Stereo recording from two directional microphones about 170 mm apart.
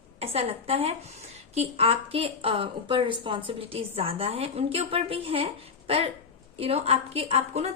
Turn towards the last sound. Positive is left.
turn(degrees=-35)  # may be behind; listen again after turning